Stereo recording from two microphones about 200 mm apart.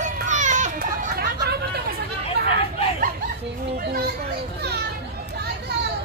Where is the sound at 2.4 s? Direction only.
55° right (ahead or behind).